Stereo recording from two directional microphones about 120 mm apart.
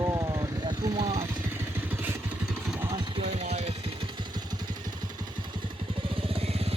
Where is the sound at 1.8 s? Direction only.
15° right (ahead or behind).